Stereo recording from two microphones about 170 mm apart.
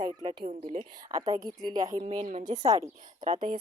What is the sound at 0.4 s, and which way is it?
Speech, 45° right (ahead or behind).